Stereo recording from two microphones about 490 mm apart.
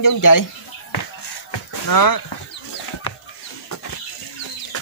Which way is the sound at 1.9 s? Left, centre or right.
Left.